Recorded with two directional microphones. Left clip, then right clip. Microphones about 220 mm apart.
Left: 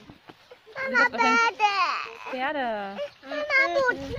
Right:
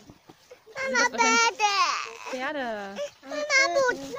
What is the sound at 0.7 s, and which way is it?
A child's voice, 25° right (ahead or behind).